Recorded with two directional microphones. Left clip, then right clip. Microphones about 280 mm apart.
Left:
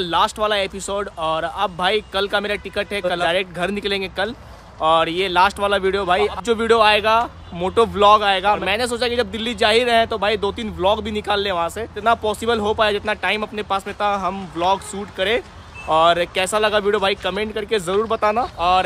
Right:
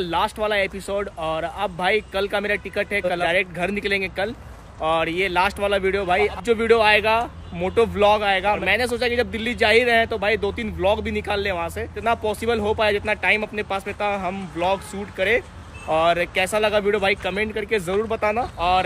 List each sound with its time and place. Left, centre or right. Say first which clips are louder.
0.0 s speech: left 4 dB; centre